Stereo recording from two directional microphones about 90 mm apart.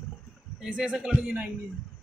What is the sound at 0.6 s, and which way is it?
Speech, 10° right (ahead or behind).